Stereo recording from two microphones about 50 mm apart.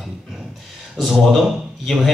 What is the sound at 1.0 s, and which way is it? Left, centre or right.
Speech, centre.